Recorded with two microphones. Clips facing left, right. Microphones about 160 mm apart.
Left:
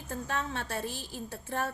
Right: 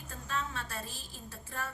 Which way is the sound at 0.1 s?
65° left (ahead or behind).